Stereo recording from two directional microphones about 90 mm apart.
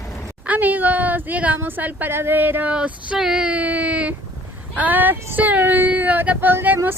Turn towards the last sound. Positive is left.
turn(degrees=-20)  # may be behind; listen again after turning